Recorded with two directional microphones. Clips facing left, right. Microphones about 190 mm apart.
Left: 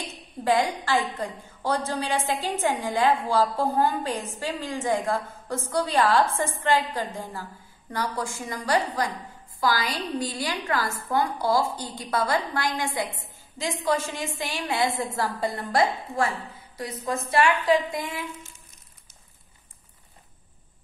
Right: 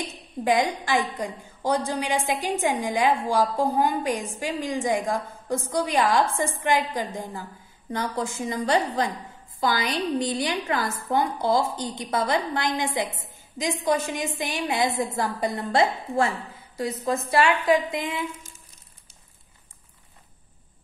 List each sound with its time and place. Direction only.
0.4 s a woman's voice: 15° right (ahead or behind)